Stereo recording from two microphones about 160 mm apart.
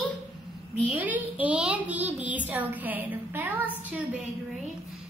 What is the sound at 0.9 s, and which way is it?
A woman's voice, 10° right (ahead or behind).